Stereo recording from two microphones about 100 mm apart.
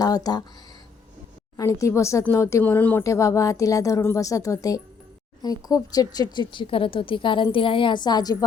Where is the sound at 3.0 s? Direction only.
30° left (ahead or behind).